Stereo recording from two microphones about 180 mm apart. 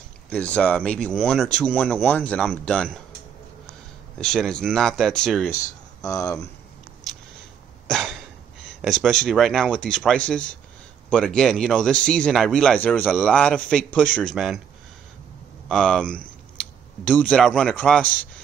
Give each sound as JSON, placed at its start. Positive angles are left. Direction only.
{"t": 0.3, "sound": "speech", "side_deg": 5}
{"t": 4.2, "sound": "speech", "side_deg": 5}
{"t": 6.0, "sound": "speech", "side_deg": 20}
{"t": 7.1, "sound": "a sound", "side_deg": 0}
{"t": 7.9, "sound": "cough", "side_deg": 0}
{"t": 8.8, "sound": "speech", "side_deg": 0}
{"t": 15.7, "sound": "a man's voice", "side_deg": 5}